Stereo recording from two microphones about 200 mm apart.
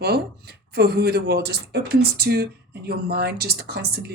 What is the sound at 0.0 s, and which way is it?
A woman's voice, 55° right (ahead or behind).